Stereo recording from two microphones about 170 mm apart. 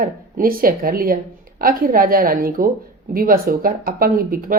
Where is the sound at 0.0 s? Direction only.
60° right (ahead or behind).